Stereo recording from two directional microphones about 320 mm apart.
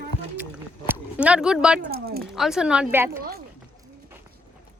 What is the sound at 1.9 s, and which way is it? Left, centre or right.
Speech, right.